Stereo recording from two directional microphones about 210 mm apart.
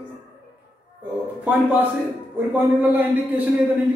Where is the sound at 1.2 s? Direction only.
10° right (ahead or behind).